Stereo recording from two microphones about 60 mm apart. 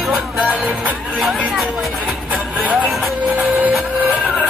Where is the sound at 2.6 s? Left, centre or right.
Centre.